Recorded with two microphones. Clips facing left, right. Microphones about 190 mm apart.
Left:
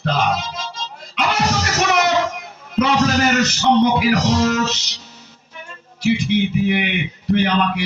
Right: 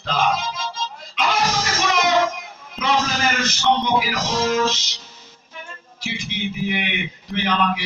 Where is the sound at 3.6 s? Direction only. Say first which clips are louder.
Left 3 dB; 60° left (ahead or behind).